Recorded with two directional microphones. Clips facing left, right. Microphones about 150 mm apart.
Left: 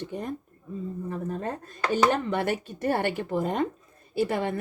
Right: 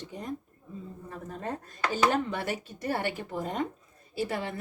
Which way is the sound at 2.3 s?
55° left (ahead or behind).